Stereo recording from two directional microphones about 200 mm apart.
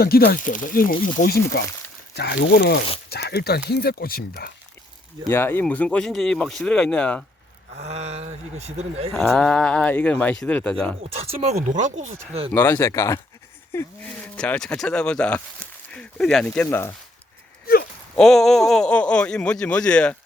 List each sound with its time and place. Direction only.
0.0 s speech: 50° left (ahead or behind)
5.2 s speech: 10° left (ahead or behind)
7.8 s speech: 30° right (ahead or behind)
9.1 s speech: centre (ahead or behind)
11.0 s speech: 30° right (ahead or behind)
12.5 s speech: 10° left (ahead or behind)
18.2 s speech: centre (ahead or behind)